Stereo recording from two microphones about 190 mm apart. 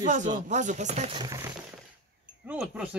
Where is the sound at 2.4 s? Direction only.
5° right (ahead or behind).